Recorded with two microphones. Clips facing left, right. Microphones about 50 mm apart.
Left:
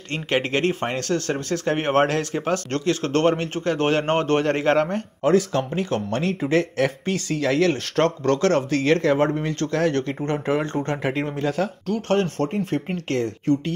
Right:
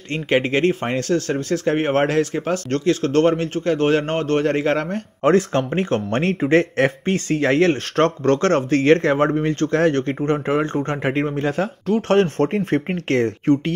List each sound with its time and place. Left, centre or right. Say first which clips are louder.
0.1 s speech: right 4 dB; centre
5.2 s speech: right 3 dB; right
6.4 s speech: right 5 dB; right
11.4 s speech: right 2 dB; centre
12.1 s speech: right 4 dB; right